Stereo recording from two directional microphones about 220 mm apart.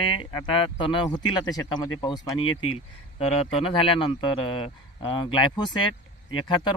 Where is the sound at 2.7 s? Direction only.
30° left (ahead or behind).